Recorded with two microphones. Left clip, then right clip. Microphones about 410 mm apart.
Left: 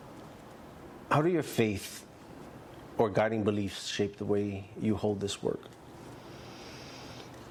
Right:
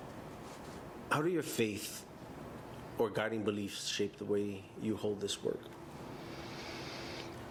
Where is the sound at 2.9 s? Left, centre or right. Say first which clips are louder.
Left 7 dB; left.